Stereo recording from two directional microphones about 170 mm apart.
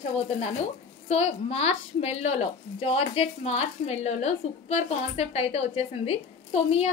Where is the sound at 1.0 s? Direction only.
40° left (ahead or behind).